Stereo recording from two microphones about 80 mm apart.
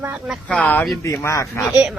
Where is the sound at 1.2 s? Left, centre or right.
Left.